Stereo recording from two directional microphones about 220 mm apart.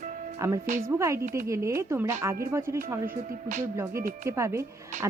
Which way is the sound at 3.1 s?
40° right (ahead or behind).